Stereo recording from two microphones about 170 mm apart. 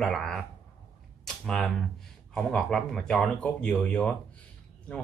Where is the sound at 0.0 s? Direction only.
Centre (ahead or behind).